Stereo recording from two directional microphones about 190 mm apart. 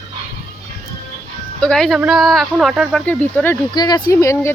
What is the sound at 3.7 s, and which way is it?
Speech, 20° left (ahead or behind).